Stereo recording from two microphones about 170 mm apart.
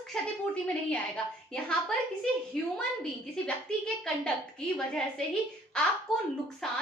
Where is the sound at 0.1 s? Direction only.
5° left (ahead or behind).